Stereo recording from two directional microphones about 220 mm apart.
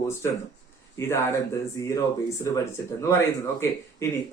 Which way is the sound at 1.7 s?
15° left (ahead or behind).